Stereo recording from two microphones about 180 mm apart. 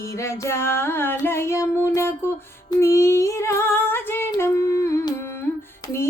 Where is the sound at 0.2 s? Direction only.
15° left (ahead or behind).